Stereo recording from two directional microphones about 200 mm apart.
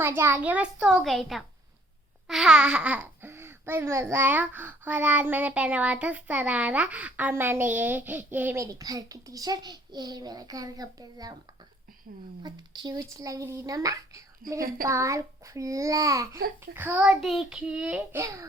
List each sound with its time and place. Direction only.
0.0 s a child's voice: 10° right (ahead or behind)
12.4 s speech: 20° right (ahead or behind)
14.4 s a woman's voice: 45° right (ahead or behind)
14.8 s speech: 15° right (ahead or behind)